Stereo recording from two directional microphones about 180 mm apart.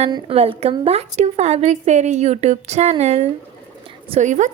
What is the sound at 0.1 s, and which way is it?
A woman's voice, 30° right (ahead or behind).